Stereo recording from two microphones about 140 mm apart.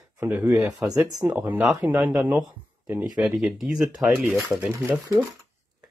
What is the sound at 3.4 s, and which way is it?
Speech, centre (ahead or behind).